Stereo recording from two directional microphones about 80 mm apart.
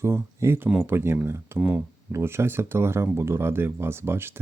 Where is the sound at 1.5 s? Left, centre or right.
Centre.